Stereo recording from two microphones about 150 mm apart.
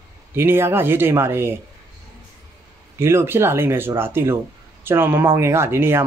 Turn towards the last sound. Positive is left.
turn(degrees=-15)  # may be behind; listen again after turning